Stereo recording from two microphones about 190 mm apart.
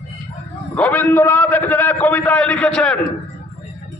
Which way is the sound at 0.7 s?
10° left (ahead or behind).